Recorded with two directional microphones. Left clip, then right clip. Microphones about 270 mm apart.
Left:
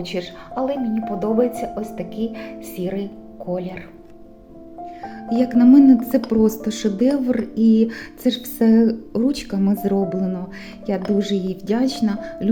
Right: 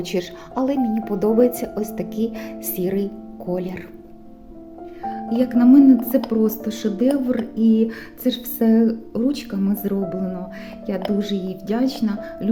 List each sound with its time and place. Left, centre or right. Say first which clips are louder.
0.0 s speech: right 2 dB; right
5.0 s speech: even; centre